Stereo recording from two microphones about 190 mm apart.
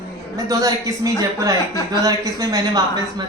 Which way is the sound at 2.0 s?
20° right (ahead or behind).